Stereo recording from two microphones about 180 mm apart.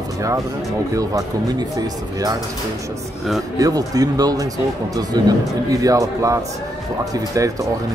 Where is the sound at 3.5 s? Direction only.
20° right (ahead or behind).